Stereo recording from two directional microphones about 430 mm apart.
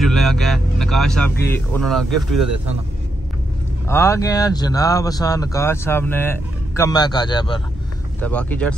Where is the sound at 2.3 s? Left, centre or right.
Right.